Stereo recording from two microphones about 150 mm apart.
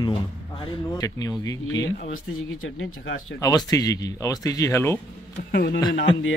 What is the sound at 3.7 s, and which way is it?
Speech, 25° left (ahead or behind).